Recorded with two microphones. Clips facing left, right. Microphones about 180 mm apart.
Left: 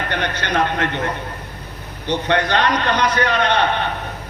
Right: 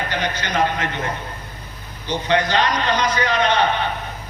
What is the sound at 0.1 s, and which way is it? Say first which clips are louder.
A man's voice: left 2 dB; 60° left (ahead or behind).